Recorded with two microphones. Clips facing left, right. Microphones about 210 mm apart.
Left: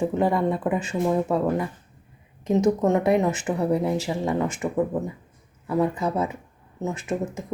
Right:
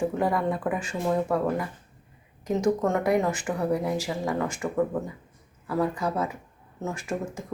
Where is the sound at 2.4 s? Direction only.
20° left (ahead or behind).